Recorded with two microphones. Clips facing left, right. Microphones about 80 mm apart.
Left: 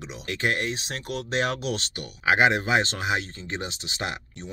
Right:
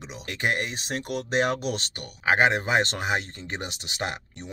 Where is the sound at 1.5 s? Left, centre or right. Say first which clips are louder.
Even; right.